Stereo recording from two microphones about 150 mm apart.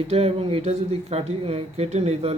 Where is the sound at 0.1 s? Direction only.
40° right (ahead or behind).